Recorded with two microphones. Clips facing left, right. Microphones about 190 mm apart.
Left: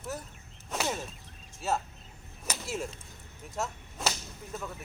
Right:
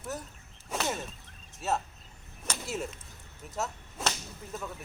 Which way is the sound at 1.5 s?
Centre (ahead or behind).